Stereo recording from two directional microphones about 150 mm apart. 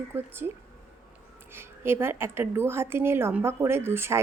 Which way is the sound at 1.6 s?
15° right (ahead or behind).